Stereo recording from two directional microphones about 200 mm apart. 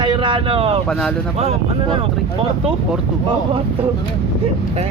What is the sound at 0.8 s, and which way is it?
Speech, 5° left (ahead or behind).